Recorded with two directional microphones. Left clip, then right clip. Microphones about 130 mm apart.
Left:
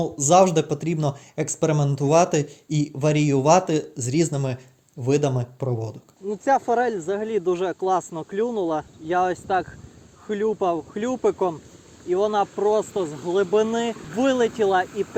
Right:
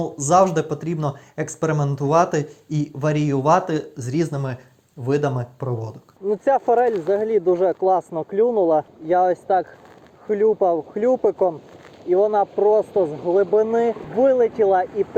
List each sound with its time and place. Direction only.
0.0 s speech: 40° left (ahead or behind)
7.1 s speech: 35° left (ahead or behind)
11.2 s speech: 65° left (ahead or behind)
12.2 s speech: 35° left (ahead or behind)
12.5 s speech: 75° left (ahead or behind)
14.4 s speech: 40° left (ahead or behind)